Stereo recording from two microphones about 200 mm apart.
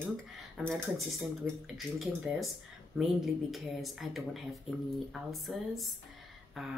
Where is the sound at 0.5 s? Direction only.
Centre (ahead or behind).